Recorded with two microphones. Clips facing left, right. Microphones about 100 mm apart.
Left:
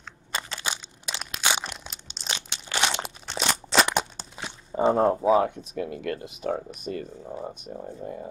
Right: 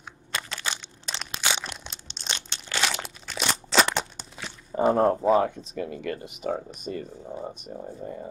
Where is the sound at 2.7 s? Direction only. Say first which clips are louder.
Left 2 dB; 20° left (ahead or behind).